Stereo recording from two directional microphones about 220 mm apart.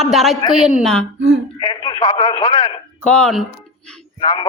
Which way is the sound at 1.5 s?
20° left (ahead or behind).